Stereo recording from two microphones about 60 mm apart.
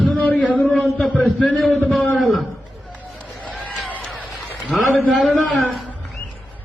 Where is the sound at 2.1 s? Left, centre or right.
Centre.